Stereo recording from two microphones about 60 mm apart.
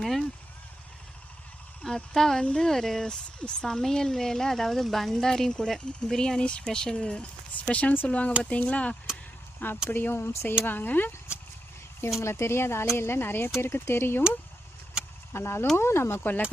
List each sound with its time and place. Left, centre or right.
0.0 s speech: centre
2.1 s speech: centre
2.4 s speech: centre
2.6 s speech: centre; by 9.0 s left
9.9 s speech: left
10.7 s speech: left
12.2 s speech: left
15.3 s speech: left
16.2 s speech: left